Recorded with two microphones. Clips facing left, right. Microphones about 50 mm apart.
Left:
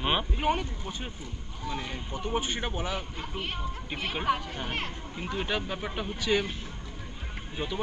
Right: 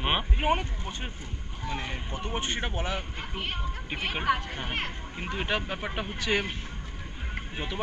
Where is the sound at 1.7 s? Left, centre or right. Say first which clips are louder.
Right 1 dB; right.